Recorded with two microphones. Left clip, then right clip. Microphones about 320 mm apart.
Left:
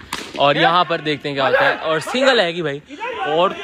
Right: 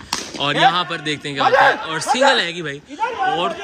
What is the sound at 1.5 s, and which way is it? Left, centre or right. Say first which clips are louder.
Speech: right 3 dB; right.